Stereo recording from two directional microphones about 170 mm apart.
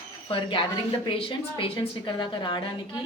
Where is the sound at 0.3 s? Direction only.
30° left (ahead or behind).